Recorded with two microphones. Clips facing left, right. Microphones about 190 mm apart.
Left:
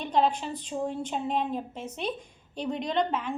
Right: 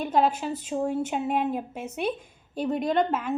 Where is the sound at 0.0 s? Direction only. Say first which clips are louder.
Right 2 dB; 5° right (ahead or behind).